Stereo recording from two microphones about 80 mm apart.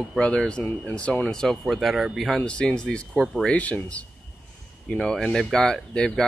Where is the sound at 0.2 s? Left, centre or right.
Centre.